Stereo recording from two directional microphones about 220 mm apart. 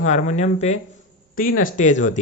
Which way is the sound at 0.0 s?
30° left (ahead or behind).